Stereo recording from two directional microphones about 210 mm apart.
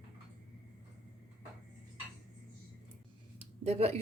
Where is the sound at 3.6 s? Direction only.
30° right (ahead or behind).